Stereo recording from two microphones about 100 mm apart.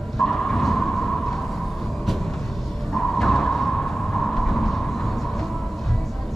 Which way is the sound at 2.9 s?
5° left (ahead or behind).